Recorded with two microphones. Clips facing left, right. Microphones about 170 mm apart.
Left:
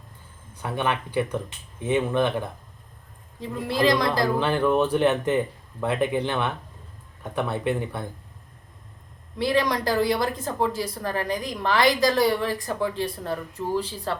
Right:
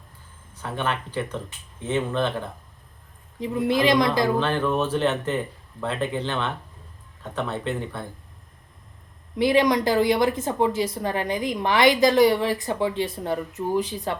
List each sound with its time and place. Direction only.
0.6 s speech: 15° left (ahead or behind)
3.4 s a woman's voice: 20° right (ahead or behind)
4.4 s speech: 15° left (ahead or behind)
9.4 s a woman's voice: 20° right (ahead or behind)